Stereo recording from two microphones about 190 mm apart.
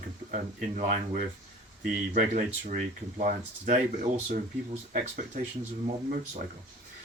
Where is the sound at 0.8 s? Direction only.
40° right (ahead or behind).